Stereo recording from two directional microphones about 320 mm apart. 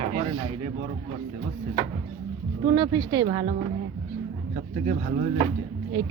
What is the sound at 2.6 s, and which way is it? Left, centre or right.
Speech, centre.